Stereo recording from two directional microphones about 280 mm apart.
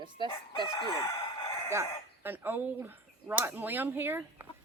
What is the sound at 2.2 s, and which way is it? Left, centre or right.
Speech, centre.